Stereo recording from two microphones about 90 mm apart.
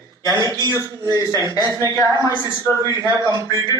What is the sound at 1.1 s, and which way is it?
Speech, 40° right (ahead or behind).